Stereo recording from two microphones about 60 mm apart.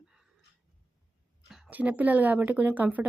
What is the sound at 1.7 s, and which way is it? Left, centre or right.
Speech, right.